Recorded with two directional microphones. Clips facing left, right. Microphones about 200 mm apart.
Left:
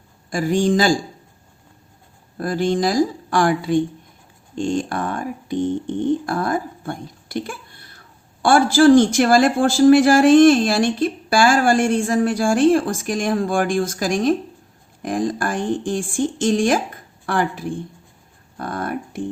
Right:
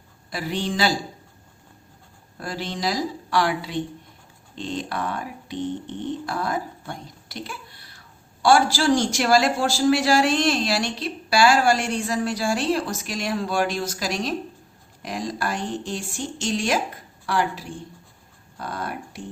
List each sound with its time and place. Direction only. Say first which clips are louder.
0.3 s a man's voice: left 9 dB; 45° left (ahead or behind)
2.4 s a man's voice: left 9 dB; 50° left (ahead or behind)